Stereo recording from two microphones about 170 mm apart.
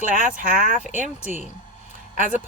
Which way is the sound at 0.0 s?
55° right (ahead or behind).